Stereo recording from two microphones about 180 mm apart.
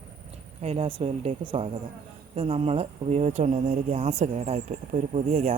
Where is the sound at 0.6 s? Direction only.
35° right (ahead or behind).